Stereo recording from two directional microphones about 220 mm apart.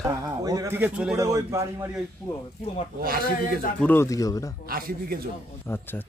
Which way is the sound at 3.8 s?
10° left (ahead or behind).